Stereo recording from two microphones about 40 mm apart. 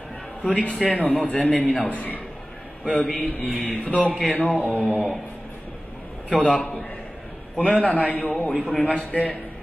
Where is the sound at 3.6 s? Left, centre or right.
Left.